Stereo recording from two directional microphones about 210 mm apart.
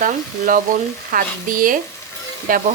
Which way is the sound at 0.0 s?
40° right (ahead or behind).